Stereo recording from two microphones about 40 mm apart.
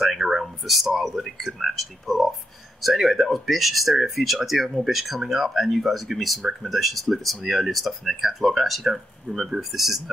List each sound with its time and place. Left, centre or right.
0.0 s speech: centre